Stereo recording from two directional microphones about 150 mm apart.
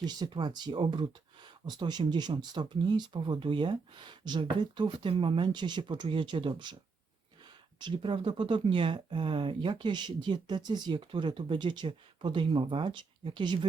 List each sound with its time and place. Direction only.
0.0 s speech: 30° right (ahead or behind)
7.8 s speech: 30° right (ahead or behind)